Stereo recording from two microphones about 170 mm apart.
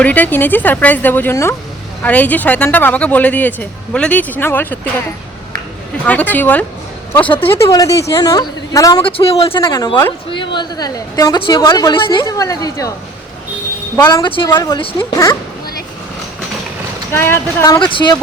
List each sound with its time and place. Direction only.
0.0 s speech: 10° left (ahead or behind)
6.1 s a woman's voice: 10° left (ahead or behind)
9.0 s speech: 35° left (ahead or behind)
9.5 s a woman's voice: 20° left (ahead or behind)
13.9 s a woman's voice: 20° left (ahead or behind)
17.1 s speech: 15° left (ahead or behind)
17.7 s a woman's voice: 30° left (ahead or behind)